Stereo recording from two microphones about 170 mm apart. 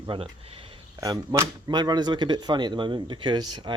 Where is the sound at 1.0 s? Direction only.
20° right (ahead or behind).